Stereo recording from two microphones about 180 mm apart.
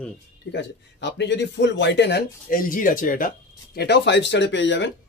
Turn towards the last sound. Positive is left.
turn(degrees=80)